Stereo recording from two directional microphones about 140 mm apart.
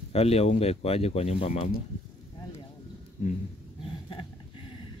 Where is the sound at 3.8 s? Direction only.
40° left (ahead or behind).